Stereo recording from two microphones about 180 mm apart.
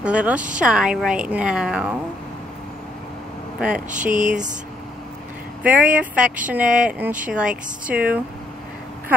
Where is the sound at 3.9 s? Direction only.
45° right (ahead or behind).